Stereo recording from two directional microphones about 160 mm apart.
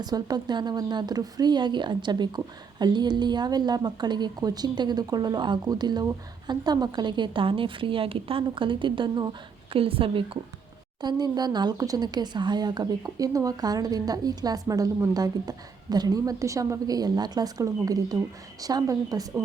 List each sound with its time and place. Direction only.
0.0 s a woman's voice: 25° right (ahead or behind)